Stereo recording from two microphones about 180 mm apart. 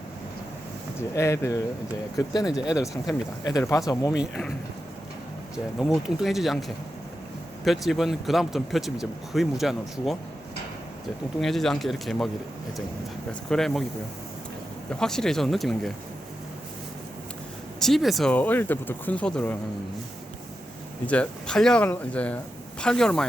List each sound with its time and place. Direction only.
0.9 s speech: 15° left (ahead or behind)
2.6 s speech: 5° right (ahead or behind)
3.1 s speech: 20° left (ahead or behind)
4.2 s speech: centre (ahead or behind)
5.8 s speech: centre (ahead or behind)
11.3 s speech: centre (ahead or behind)
13.5 s speech: centre (ahead or behind)
14.8 s speech: 5° left (ahead or behind)
17.7 s speech: centre (ahead or behind)
21.1 s speech: 5° left (ahead or behind)